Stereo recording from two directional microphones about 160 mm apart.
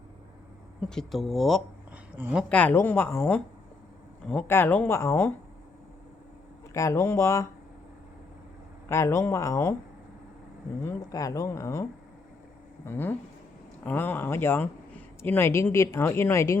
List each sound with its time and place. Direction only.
0.9 s speech: centre (ahead or behind)
2.1 s speech: 10° right (ahead or behind)
2.5 s speech: 10° left (ahead or behind)
6.7 s speech: 20° left (ahead or behind)
8.9 s speech: 15° left (ahead or behind)
10.8 s speech: 20° left (ahead or behind)